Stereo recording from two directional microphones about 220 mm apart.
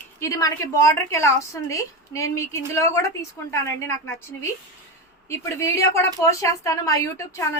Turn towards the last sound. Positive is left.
turn(degrees=15)  # may be behind; listen again after turning